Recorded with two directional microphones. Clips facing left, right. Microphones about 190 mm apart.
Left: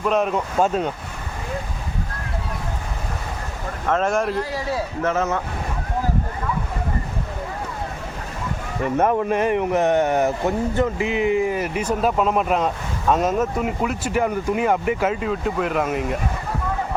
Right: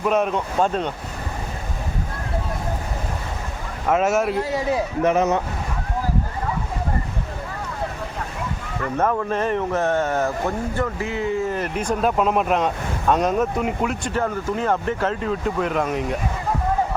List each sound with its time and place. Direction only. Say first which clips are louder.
0.0 s speech: even; centre (ahead or behind)
3.8 s speech: right 2 dB; 10° right (ahead or behind)
4.5 s speech: right 3 dB; 15° right (ahead or behind)
8.8 s speech: left 3 dB; 20° left (ahead or behind); by 14.1 s centre (ahead or behind)
14.1 s speech: left 2 dB; 15° left (ahead or behind)